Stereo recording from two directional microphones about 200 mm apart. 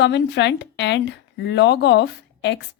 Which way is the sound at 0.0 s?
60° left (ahead or behind).